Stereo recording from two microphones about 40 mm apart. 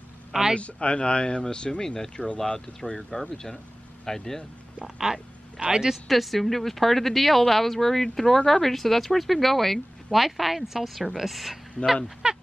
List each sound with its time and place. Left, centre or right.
0.3 s speech: centre
0.6 s speech: left
3.0 s speech: centre
4.8 s speech: centre
6.0 s speech: centre
12.2 s speech: right